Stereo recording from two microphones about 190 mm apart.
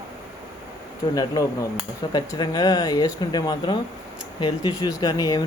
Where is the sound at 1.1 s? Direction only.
20° left (ahead or behind).